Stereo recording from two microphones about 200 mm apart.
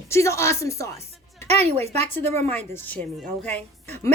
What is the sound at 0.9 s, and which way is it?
Speech, 30° right (ahead or behind).